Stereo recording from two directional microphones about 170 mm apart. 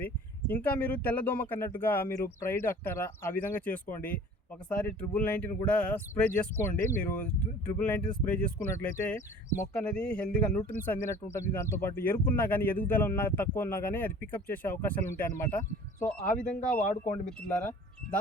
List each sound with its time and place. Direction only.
0.0 s speech: 10° left (ahead or behind)
16.8 s speech: 45° left (ahead or behind)